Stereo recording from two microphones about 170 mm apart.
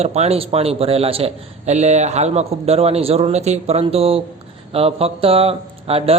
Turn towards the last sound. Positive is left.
turn(degrees=-35)  # may be behind; listen again after turning